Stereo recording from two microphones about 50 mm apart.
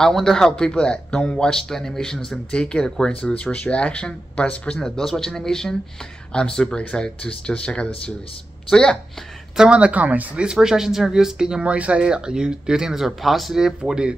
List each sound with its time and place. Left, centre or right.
0.0 s speech: centre
4.8 s speech: centre
9.7 s speech: right
10.4 s speech: centre
11.6 s speech: right